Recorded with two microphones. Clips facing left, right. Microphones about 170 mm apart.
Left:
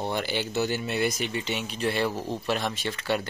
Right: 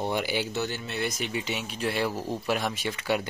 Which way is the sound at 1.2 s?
5° right (ahead or behind).